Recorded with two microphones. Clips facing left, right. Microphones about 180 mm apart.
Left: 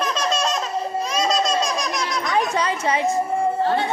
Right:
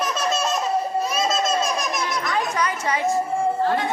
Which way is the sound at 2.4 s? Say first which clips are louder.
Left 4 dB; 25° left (ahead or behind).